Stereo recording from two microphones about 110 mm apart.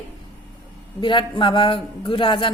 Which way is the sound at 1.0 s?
45° left (ahead or behind).